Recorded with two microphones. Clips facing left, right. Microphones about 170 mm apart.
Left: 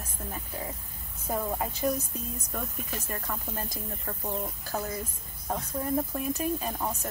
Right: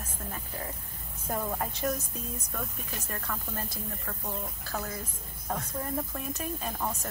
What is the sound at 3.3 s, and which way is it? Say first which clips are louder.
Speech: even; 15° left (ahead or behind).